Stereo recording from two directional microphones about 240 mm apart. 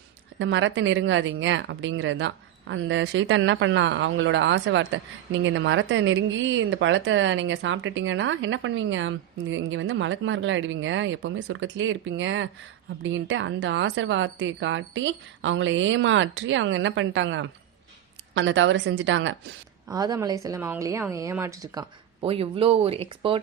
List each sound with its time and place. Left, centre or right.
0.3 s speech: right
19.9 s speech: centre